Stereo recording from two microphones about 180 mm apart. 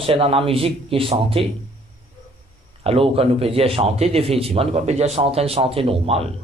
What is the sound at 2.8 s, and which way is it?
A man's voice, 35° right (ahead or behind).